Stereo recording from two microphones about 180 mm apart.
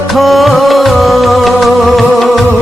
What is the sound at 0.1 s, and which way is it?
Music, centre (ahead or behind).